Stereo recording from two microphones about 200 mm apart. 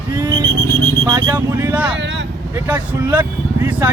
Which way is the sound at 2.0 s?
65° right (ahead or behind).